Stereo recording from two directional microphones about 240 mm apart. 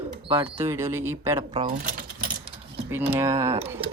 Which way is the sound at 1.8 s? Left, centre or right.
Right.